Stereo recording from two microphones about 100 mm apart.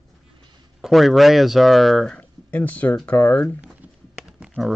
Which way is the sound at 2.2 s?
15° left (ahead or behind).